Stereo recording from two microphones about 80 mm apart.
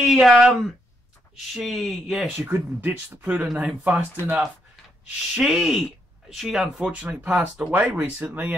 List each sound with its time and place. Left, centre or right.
0.0 s speech: centre
2.2 s speech: right
5.0 s speech: centre
7.7 s speech: right